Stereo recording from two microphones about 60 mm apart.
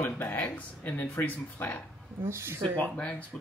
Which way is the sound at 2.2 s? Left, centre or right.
Right.